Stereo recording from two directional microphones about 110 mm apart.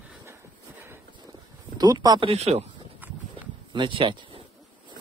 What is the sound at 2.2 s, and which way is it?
Speech, 70° right (ahead or behind).